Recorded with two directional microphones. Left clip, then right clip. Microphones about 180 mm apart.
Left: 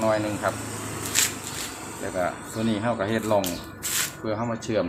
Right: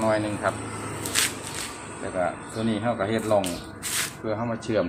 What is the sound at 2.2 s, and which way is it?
Speech, 20° left (ahead or behind).